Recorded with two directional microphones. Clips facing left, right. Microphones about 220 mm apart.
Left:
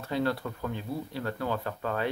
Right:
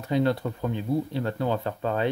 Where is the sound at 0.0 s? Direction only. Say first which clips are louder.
Right 5 dB; 20° right (ahead or behind).